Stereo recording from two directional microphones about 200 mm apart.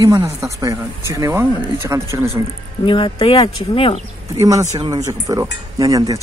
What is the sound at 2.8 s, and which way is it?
Speech, 25° left (ahead or behind).